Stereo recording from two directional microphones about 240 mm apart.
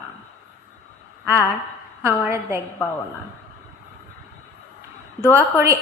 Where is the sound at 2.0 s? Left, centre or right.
Centre.